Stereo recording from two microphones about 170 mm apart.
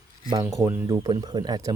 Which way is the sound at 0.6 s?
10° right (ahead or behind).